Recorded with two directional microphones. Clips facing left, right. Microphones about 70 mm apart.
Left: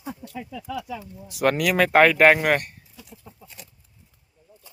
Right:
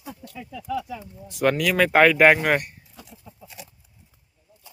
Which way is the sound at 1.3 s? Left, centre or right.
Centre.